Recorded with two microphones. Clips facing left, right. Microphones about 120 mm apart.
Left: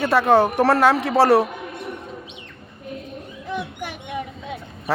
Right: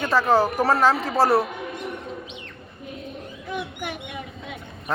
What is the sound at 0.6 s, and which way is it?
Speech, 80° left.